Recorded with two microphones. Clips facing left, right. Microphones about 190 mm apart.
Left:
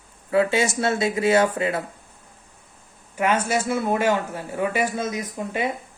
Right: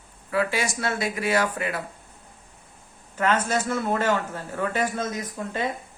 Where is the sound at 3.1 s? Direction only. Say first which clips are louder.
Left 2 dB; 10° left (ahead or behind).